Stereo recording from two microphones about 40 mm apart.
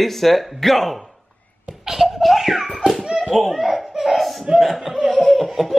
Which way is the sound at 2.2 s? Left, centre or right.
Centre.